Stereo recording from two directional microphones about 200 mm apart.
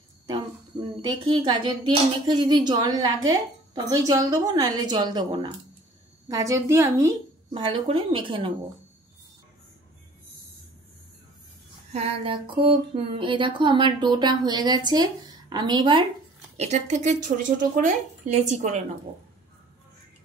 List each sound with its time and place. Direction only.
0.3 s a woman's voice: 20° right (ahead or behind)
11.9 s a woman's voice: 30° right (ahead or behind)
16.5 s speech: 35° right (ahead or behind)